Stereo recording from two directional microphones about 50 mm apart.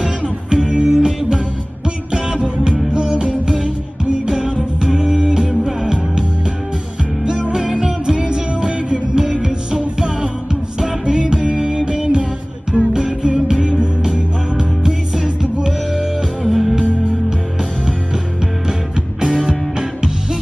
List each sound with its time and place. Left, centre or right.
0.0 s music: centre
7.2 s music: centre
18.9 s music: centre